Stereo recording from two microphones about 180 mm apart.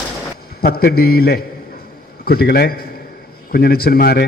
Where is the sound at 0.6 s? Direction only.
60° left (ahead or behind).